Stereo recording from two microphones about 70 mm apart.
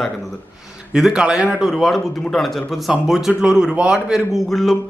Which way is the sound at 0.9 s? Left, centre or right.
Centre.